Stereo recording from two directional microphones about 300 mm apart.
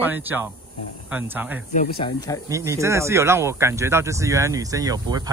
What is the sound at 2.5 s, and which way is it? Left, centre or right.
Speech, centre.